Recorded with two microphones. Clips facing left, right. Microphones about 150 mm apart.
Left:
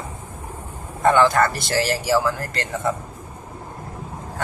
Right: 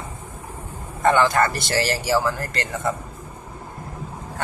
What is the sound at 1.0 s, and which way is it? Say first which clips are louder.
Speech: left 2 dB; centre (ahead or behind).